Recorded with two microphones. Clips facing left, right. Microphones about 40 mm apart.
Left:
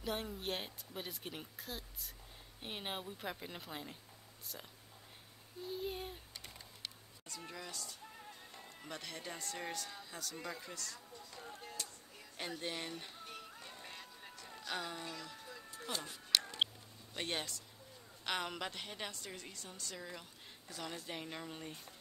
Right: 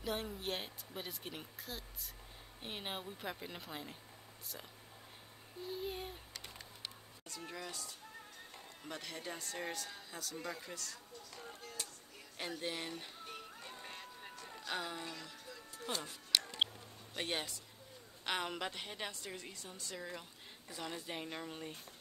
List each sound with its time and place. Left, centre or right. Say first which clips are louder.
0.0 s speech: even; centre
5.7 s speech: even; centre
7.4 s a woman's voice: right 2 dB; centre
8.8 s speech: right 1 dB; centre
12.4 s music: right 1 dB; centre
14.6 s speech: right 1 dB; centre
15.9 s speech: right 1 dB; centre
17.2 s a woman's voice: right 1 dB; centre